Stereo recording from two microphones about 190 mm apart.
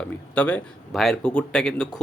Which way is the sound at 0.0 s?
5° left (ahead or behind).